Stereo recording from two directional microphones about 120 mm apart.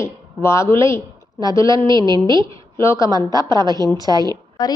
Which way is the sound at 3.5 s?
35° right (ahead or behind).